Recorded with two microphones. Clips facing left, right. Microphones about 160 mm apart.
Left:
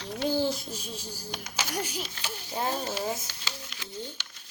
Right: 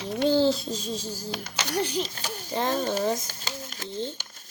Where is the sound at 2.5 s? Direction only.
10° left (ahead or behind).